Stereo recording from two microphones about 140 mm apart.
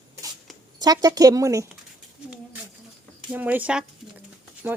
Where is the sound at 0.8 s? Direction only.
25° right (ahead or behind).